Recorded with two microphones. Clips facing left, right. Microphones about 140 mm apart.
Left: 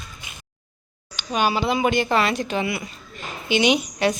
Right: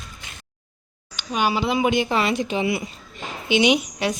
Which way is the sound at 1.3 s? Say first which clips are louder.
Left 1 dB; 10° right (ahead or behind).